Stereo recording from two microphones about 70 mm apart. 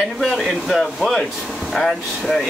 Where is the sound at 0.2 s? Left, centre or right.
Centre.